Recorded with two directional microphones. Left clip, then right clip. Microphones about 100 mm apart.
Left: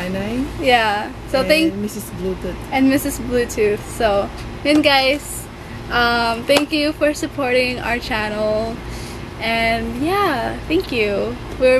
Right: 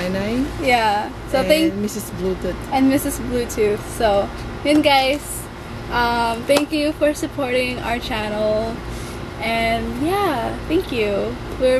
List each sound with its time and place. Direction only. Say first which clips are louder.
0.0 s a sound: right 2 dB; 20° right (ahead or behind)
0.6 s speech: left 2 dB; 15° left (ahead or behind)
2.7 s speech: left 1 dB; 10° left (ahead or behind)